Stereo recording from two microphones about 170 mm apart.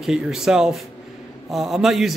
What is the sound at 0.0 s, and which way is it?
A man's voice, centre (ahead or behind).